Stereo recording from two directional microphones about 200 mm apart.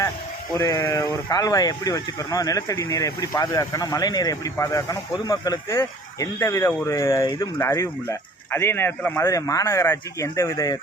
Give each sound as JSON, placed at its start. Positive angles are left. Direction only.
{"t": 0.5, "sound": "speech", "side_deg": 15}